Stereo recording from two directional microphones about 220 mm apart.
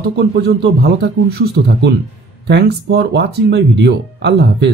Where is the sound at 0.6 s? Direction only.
50° right (ahead or behind).